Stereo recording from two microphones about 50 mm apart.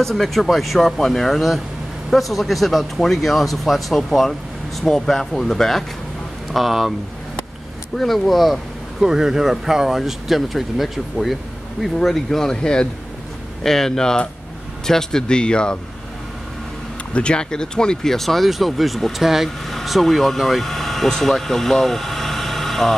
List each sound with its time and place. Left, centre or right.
0.0 s speech: centre
6.5 s speech: centre
7.9 s speech: centre
17.1 s speech: left; by 22.9 s centre